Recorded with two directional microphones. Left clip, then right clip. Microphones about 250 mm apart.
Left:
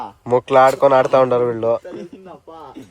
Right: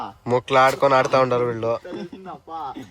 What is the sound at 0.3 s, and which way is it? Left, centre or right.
Speech, centre.